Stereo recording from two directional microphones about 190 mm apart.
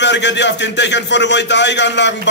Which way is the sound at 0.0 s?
70° left (ahead or behind).